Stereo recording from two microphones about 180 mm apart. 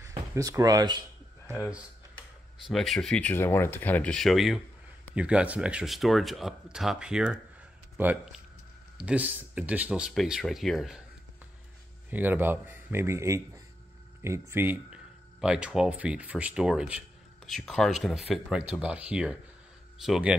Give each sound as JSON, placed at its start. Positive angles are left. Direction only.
{"t": 0.3, "sound": "speech", "side_deg": -20}
{"t": 2.6, "sound": "a man's voice", "side_deg": 0}
{"t": 12.1, "sound": "a man's voice", "side_deg": -10}